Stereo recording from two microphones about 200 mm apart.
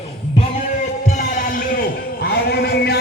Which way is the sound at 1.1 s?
45° left (ahead or behind).